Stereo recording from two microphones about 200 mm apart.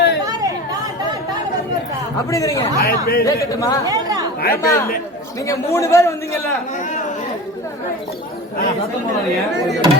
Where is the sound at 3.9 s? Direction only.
20° right (ahead or behind).